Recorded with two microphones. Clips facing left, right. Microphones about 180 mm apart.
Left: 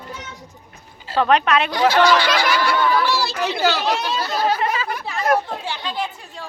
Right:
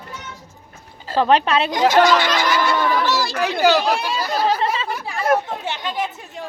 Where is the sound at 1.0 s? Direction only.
30° right (ahead or behind).